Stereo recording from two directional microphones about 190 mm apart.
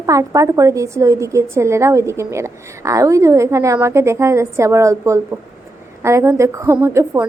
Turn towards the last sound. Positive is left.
turn(degrees=-15)  # may be behind; listen again after turning